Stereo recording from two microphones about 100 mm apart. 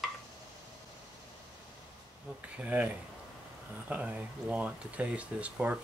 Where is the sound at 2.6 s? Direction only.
15° right (ahead or behind).